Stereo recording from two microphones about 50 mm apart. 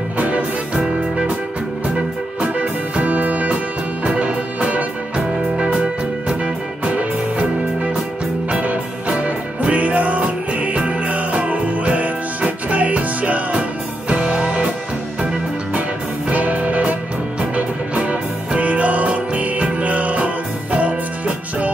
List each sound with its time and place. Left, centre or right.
2.4 s music: right
6.8 s music: right
16.3 s music: right